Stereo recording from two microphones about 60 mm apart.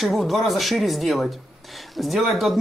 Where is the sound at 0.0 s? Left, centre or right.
Centre.